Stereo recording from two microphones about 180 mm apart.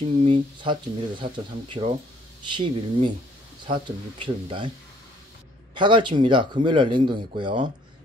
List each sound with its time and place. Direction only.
0.2 s speech: 30° right (ahead or behind)
5.8 s speech: 25° right (ahead or behind)